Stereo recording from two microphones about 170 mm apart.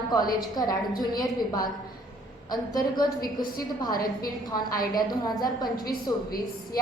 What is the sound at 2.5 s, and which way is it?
Speech, 25° left (ahead or behind).